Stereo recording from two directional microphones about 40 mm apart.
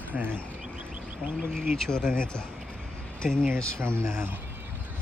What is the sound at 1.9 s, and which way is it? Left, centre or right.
Speech, centre.